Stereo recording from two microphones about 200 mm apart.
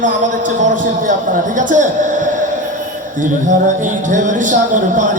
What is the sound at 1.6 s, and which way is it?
A man's voice, 40° right (ahead or behind).